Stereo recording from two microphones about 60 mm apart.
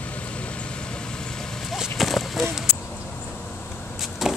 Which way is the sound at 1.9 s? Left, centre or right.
Centre.